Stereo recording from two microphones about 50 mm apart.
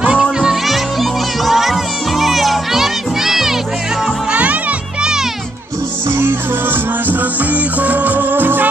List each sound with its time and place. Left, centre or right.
0.1 s music: centre
4.3 s music: right
6.1 s music: right